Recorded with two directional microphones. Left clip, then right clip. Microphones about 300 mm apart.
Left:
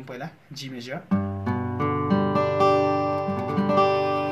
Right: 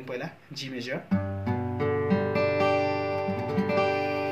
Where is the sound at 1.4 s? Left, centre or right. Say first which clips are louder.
Left 3 dB; centre.